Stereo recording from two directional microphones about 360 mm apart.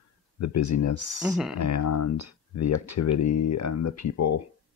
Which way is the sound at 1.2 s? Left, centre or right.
Centre.